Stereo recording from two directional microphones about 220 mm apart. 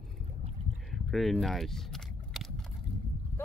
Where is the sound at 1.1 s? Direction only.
Centre (ahead or behind).